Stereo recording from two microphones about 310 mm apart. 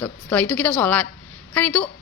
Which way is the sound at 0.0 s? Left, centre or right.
Centre.